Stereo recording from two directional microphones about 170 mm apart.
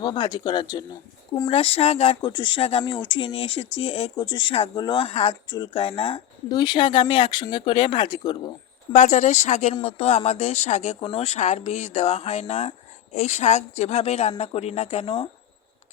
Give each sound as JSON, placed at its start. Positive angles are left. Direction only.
{"t": 0.0, "sound": "speech", "side_deg": 25}
{"t": 8.9, "sound": "speech", "side_deg": 45}